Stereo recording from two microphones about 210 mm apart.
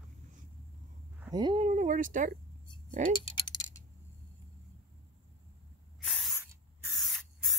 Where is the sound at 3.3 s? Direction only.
20° left (ahead or behind).